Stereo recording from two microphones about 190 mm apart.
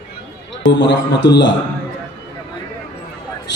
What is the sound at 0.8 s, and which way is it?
Speech, 65° left (ahead or behind).